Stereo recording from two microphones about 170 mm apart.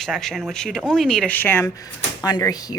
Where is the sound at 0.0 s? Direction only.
Centre (ahead or behind).